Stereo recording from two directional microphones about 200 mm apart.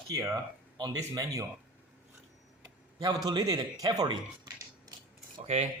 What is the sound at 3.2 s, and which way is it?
Speech, 20° right (ahead or behind).